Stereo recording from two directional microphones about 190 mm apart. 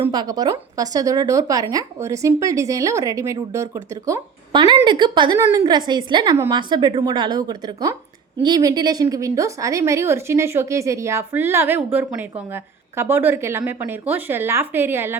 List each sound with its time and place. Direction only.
0.0 s a woman's voice: 20° right (ahead or behind)